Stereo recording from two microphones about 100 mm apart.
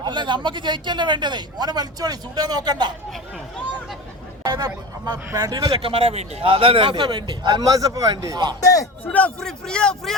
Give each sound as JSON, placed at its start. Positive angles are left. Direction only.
{"t": 0.0, "sound": "a man's voice", "side_deg": -50}
{"t": 4.4, "sound": "a man's voice", "side_deg": -35}
{"t": 9.0, "sound": "a man's voice", "side_deg": 10}